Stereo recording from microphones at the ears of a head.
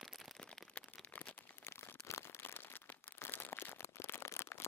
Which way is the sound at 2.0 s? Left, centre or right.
Left.